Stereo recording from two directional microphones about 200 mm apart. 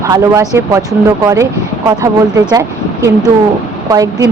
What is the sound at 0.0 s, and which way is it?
Speech, 15° right (ahead or behind).